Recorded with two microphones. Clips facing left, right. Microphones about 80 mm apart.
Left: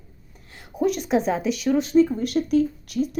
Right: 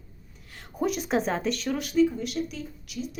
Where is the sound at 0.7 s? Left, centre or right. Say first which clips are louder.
Left 5 dB; centre.